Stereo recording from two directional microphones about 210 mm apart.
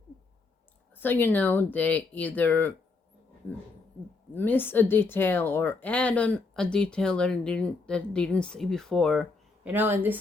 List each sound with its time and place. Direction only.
0.9 s speech: 10° left (ahead or behind)
4.4 s speech: 10° left (ahead or behind)
9.6 s speech: 10° right (ahead or behind)